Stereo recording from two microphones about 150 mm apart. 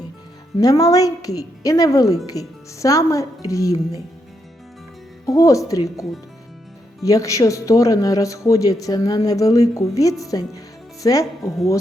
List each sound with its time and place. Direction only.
0.6 s speech: 25° left (ahead or behind)
5.2 s speech: 20° left (ahead or behind)